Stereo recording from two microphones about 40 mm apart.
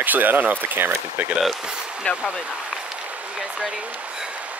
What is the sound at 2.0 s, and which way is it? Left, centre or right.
Speech, left.